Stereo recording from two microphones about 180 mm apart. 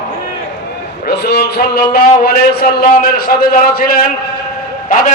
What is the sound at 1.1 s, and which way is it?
A man's voice, 65° left (ahead or behind).